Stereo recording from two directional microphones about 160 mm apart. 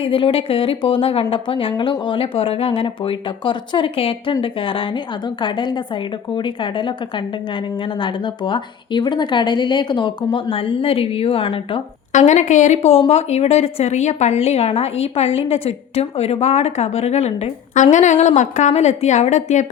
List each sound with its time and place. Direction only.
0.0 s speech: 35° left (ahead or behind)
12.1 s a woman's voice: 50° left (ahead or behind)